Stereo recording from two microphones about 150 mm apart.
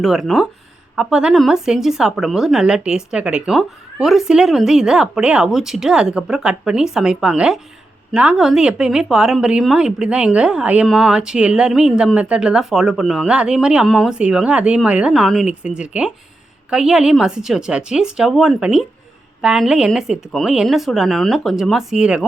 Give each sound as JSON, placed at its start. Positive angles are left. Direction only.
{"t": 0.0, "sound": "speech", "side_deg": 0}